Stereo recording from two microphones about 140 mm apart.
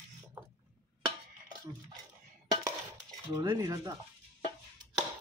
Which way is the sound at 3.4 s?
25° right (ahead or behind).